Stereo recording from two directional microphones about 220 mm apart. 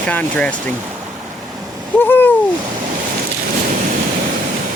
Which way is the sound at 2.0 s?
10° left (ahead or behind).